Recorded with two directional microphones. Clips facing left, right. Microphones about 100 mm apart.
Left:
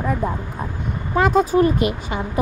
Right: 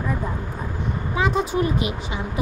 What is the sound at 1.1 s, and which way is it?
Speech, 45° left (ahead or behind).